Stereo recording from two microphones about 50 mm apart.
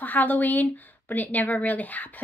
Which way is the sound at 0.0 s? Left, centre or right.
Left.